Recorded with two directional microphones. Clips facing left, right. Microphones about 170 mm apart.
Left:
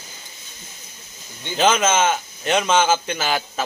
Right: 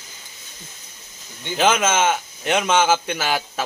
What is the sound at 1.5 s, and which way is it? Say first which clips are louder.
Speech: left 1 dB; 10° right (ahead or behind).